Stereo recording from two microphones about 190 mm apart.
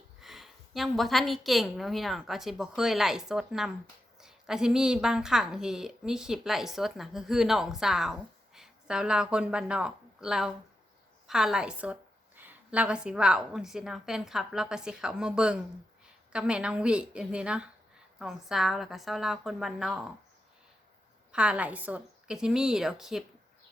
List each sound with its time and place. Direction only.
0.2 s a woman's voice: centre (ahead or behind)
21.3 s a woman's voice: 5° right (ahead or behind)